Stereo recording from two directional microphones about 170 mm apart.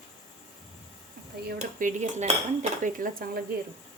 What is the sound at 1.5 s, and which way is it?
Cutlery, 45° right (ahead or behind).